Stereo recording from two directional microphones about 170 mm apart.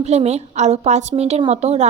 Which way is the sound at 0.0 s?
40° right (ahead or behind).